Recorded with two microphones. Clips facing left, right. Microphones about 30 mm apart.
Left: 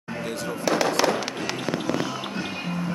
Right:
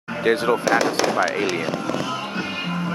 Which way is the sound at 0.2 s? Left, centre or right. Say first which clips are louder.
Right 13 dB; right.